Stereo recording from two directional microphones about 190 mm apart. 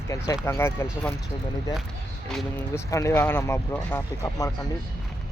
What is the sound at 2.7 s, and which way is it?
Speech, 15° left (ahead or behind).